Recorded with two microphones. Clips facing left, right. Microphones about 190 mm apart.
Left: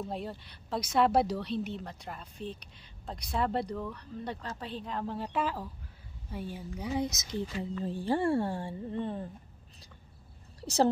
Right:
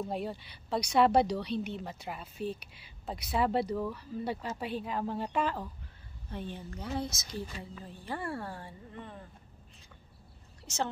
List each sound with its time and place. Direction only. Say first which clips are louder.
0.0 s a woman's voice: right 2 dB; centre (ahead or behind); by 7.4 s 20° left (ahead or behind)
7.8 s speech: left 10 dB; 30° left (ahead or behind)